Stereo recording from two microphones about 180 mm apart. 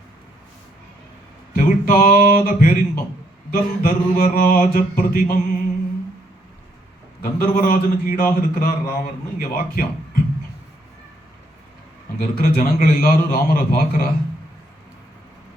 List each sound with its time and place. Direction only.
1.5 s a man's voice: 50° left (ahead or behind)
7.2 s a man's voice: 55° left (ahead or behind)
12.2 s a man's voice: 50° left (ahead or behind)